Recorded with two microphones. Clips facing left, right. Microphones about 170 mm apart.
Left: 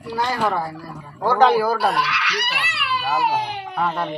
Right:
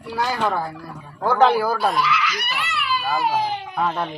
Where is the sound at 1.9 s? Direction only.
70° left (ahead or behind).